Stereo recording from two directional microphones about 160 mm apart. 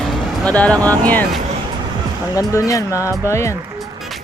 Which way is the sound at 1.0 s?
10° left (ahead or behind).